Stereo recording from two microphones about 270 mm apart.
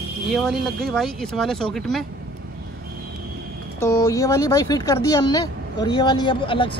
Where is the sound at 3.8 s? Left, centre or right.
Centre.